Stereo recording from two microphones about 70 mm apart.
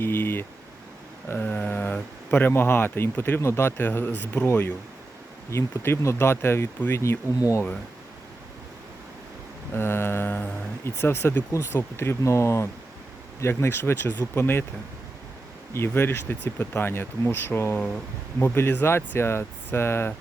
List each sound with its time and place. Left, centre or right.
0.0 s speech: left
7.3 s speech: left
9.7 s speech: left
15.7 s speech: left
17.7 s speech: centre
18.3 s speech: left